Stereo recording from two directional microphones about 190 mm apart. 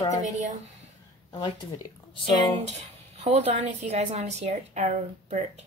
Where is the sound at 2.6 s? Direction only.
35° right (ahead or behind).